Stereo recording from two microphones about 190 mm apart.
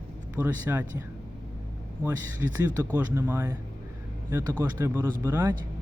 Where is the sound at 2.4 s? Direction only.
15° right (ahead or behind).